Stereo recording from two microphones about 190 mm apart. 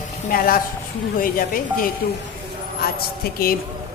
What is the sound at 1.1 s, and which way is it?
A woman's voice, 50° left (ahead or behind).